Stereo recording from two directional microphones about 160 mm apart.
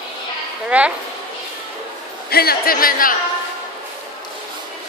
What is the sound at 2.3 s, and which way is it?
Speech, 70° left (ahead or behind).